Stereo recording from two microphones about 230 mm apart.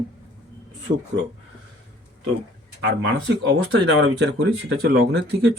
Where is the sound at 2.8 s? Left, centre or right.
Right.